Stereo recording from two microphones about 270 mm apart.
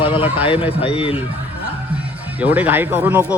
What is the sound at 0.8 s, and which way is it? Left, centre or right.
Speech, centre.